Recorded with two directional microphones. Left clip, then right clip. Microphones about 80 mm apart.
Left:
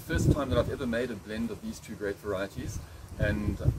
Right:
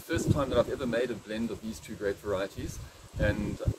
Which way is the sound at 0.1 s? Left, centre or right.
Right.